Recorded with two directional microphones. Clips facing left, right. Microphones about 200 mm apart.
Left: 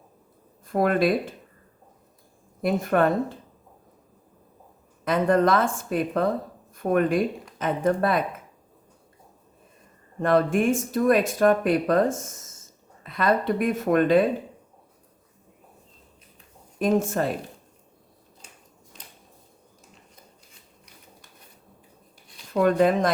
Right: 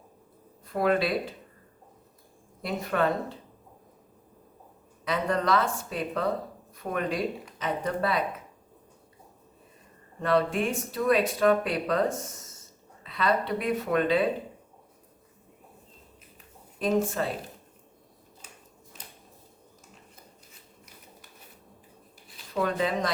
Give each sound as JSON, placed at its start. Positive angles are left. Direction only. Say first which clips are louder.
{"t": 0.7, "sound": "speech", "louder": "left 4 dB", "side_deg": 50}
{"t": 2.6, "sound": "speech", "louder": "left 6 dB", "side_deg": 50}
{"t": 5.0, "sound": "speech", "louder": "left 7 dB", "side_deg": 50}
{"t": 10.2, "sound": "speech", "louder": "left 4 dB", "side_deg": 50}
{"t": 16.8, "sound": "speech", "louder": "left 4 dB", "side_deg": 50}
{"t": 22.5, "sound": "speech", "louder": "left 8 dB", "side_deg": 50}